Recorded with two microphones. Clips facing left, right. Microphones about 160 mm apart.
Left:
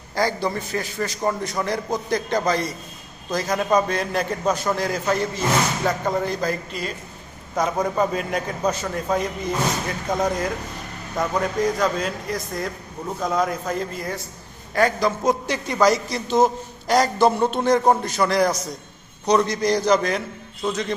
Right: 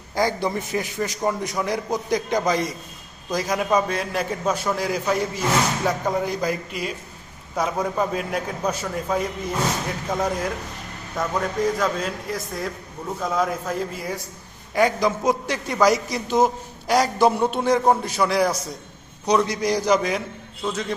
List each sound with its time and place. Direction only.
0.2 s a man's voice: 20° right (ahead or behind)